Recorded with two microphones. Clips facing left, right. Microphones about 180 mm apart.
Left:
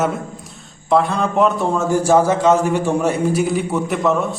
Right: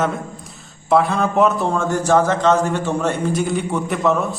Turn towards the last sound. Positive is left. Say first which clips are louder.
# left 1 dB
turn(degrees=0)  # may be behind; listen again after turning